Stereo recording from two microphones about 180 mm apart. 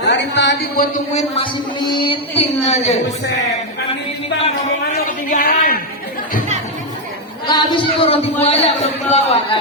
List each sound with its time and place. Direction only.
0.0 s speech: 75° left (ahead or behind)
1.1 s a man's voice: 25° left (ahead or behind)
5.4 s speech: 55° left (ahead or behind)
7.4 s a man's voice: 25° left (ahead or behind)